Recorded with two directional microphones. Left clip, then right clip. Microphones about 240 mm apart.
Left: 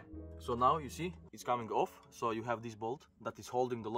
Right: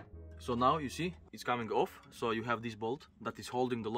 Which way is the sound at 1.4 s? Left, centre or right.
Left.